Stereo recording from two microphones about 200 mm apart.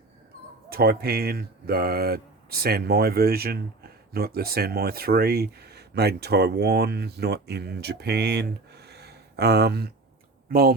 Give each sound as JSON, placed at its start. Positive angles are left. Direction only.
{"t": 0.7, "sound": "speech", "side_deg": -50}